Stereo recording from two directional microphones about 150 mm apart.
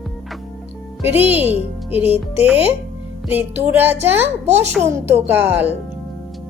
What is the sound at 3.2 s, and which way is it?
Speech, 10° right (ahead or behind).